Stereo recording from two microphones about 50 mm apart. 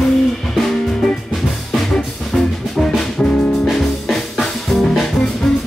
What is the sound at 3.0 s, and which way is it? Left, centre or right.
Music, centre.